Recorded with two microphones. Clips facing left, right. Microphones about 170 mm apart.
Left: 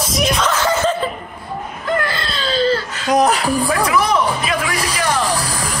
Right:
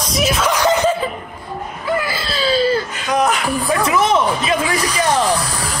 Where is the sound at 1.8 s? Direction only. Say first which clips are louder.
Even; 5° right (ahead or behind).